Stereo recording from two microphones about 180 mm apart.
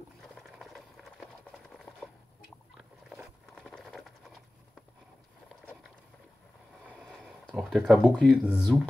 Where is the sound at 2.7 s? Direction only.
5° right (ahead or behind).